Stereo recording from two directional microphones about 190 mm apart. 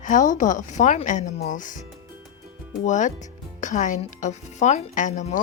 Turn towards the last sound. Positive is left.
turn(degrees=40)  # may be behind; listen again after turning